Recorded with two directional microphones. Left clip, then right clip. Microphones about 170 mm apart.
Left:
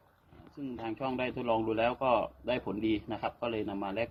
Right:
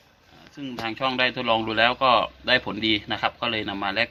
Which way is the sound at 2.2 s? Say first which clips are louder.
Right 11 dB; 55° right (ahead or behind).